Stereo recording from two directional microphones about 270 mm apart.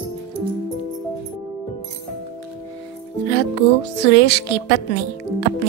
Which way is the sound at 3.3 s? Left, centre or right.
Left.